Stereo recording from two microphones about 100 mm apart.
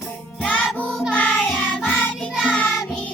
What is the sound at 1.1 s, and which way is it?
Music, 10° left (ahead or behind).